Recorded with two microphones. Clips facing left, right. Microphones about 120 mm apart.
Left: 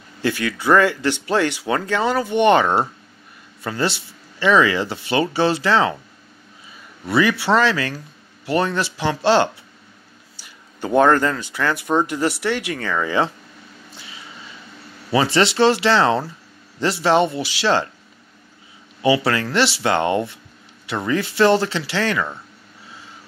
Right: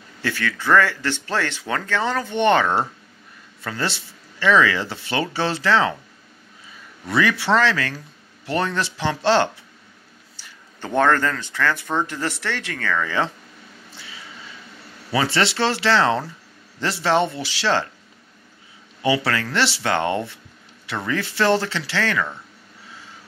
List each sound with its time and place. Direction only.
0.2 s speech: 15° left (ahead or behind)
7.1 s speech: 10° left (ahead or behind)
15.1 s speech: 15° left (ahead or behind)
19.0 s speech: 15° left (ahead or behind)